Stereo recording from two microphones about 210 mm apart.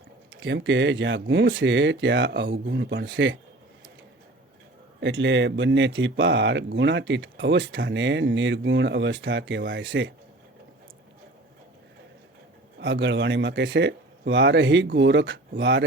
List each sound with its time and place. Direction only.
0.3 s speech: 60° right (ahead or behind)
4.9 s speech: 60° right (ahead or behind)
12.8 s speech: 60° right (ahead or behind)